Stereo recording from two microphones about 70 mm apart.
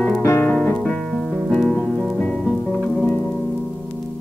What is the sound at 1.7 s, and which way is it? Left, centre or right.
Music, centre.